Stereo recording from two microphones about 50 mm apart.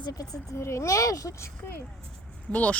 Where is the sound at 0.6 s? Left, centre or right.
Left.